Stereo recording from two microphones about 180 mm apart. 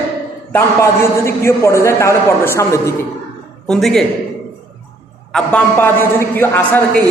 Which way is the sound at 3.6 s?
5° left (ahead or behind).